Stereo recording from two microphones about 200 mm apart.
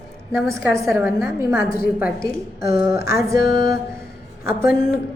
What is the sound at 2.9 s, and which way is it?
Speech, 50° left (ahead or behind).